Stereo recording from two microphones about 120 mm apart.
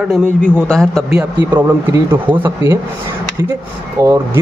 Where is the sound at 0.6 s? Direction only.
5° left (ahead or behind).